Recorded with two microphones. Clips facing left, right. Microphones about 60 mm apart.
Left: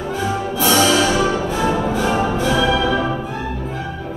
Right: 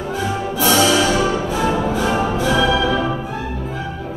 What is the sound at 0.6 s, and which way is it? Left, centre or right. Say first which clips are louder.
Music: even; centre.